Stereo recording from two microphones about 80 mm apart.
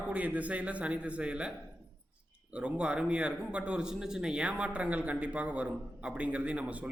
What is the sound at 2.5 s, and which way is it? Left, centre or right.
A man's voice, centre.